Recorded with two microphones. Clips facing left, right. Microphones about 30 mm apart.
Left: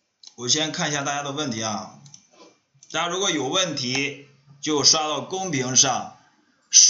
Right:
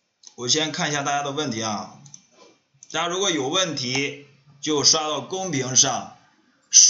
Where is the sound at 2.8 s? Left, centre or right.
Centre.